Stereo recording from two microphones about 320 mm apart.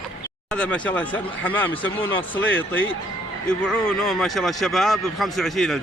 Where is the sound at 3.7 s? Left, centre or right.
Centre.